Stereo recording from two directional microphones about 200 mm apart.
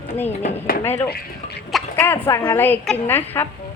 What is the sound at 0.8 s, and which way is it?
Speech, 10° left (ahead or behind).